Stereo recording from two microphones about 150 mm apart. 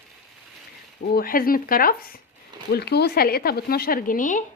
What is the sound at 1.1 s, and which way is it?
Speech, 80° left.